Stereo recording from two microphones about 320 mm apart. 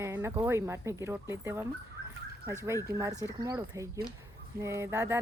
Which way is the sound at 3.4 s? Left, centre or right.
Centre.